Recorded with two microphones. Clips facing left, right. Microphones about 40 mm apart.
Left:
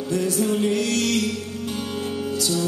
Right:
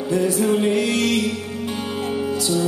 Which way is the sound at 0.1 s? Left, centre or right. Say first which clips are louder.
Right 4 dB; right.